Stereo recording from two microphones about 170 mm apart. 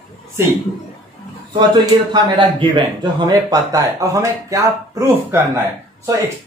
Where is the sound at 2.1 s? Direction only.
25° right (ahead or behind).